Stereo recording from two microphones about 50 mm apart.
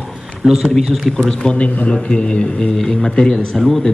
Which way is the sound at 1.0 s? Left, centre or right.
Centre.